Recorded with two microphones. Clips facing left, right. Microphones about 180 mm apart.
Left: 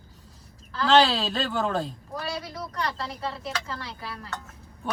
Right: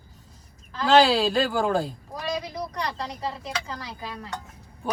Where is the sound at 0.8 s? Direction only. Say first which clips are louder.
Right 2 dB; centre (ahead or behind).